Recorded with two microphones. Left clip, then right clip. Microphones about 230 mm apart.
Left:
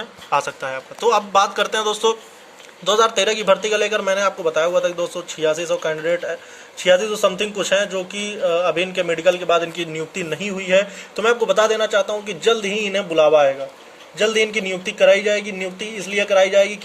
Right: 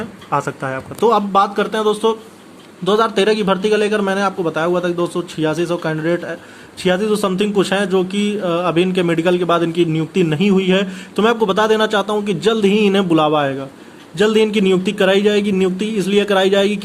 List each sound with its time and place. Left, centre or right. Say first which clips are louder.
0.3 s a man's voice: right 1 dB; centre
12.6 s a man's voice: right 7 dB; right
14.2 s a man's voice: right 4 dB; right